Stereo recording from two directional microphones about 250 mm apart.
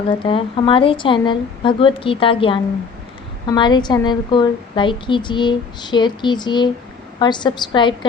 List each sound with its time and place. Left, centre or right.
0.3 s a woman's voice: left